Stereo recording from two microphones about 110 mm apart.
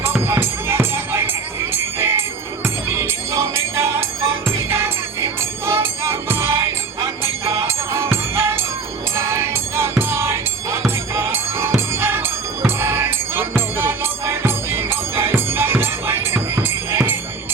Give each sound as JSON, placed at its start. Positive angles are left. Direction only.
{"t": 0.0, "sound": "music", "side_deg": -20}